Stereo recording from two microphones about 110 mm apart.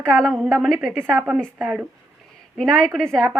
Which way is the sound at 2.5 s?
5° left (ahead or behind).